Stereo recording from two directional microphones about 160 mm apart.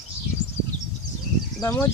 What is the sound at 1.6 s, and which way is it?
Speech, 15° left (ahead or behind).